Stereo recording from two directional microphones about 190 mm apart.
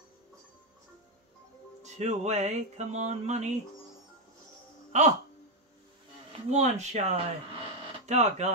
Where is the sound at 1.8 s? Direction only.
35° right (ahead or behind).